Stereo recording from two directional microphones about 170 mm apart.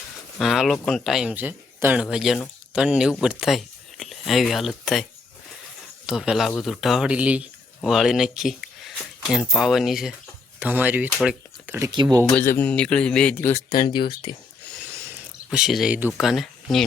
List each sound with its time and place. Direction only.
0.3 s speech: centre (ahead or behind)
6.1 s speech: centre (ahead or behind)
12.4 s a man's voice: 10° left (ahead or behind)
13.7 s speech: 25° left (ahead or behind)
14.9 s a sound: 15° right (ahead or behind)
15.4 s speech: centre (ahead or behind)